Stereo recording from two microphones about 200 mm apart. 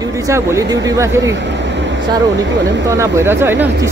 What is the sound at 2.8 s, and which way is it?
Speech, 15° right (ahead or behind).